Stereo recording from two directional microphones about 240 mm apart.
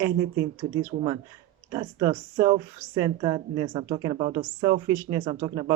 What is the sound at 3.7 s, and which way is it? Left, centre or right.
Speech, right.